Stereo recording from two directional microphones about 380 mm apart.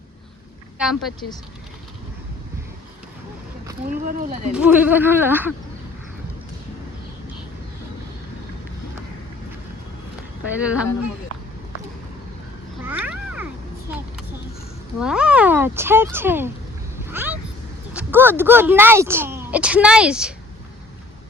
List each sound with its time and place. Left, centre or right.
0.8 s speech: centre
3.8 s speech: right
4.5 s speech: centre
10.6 s speech: centre
12.8 s cat: centre
14.9 s speech: centre
17.0 s vehicle: centre
17.9 s speech: centre